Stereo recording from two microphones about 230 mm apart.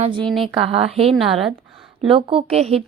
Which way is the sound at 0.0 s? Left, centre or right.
Right.